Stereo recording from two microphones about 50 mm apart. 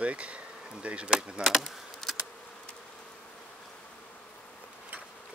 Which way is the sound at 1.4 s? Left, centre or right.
Centre.